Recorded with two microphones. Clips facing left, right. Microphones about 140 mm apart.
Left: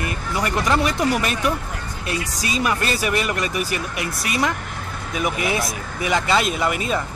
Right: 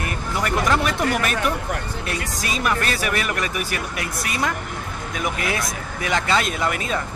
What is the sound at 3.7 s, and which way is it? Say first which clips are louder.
Speech: left 2 dB; 50° right (ahead or behind).